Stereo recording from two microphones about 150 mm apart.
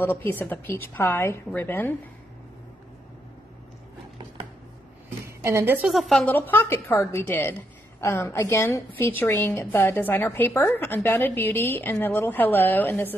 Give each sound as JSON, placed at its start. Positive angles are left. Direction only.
{"t": 0.0, "sound": "a woman's voice", "side_deg": 15}
{"t": 5.4, "sound": "a woman's voice", "side_deg": -15}
{"t": 5.9, "sound": "a woman's voice", "side_deg": 0}
{"t": 6.3, "sound": "a woman's voice", "side_deg": 15}